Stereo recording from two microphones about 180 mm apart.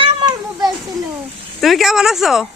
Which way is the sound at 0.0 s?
25° right (ahead or behind).